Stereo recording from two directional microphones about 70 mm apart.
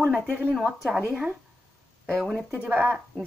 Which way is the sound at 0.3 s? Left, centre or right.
Right.